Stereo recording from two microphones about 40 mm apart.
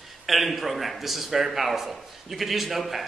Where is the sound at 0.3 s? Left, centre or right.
Centre.